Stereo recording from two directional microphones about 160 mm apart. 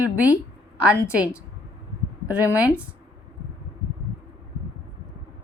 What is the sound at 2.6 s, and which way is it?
Speech, 10° right (ahead or behind).